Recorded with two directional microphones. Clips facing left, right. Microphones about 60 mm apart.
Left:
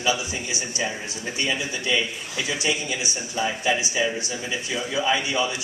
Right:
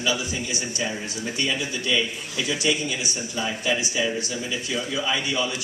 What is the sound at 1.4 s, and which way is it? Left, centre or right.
Speech, left.